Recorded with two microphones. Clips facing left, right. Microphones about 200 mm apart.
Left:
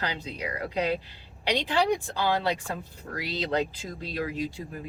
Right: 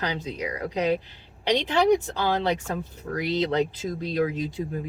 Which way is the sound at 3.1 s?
20° right (ahead or behind).